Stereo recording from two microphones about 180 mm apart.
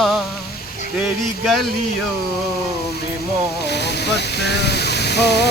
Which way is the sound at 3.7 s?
70° left (ahead or behind).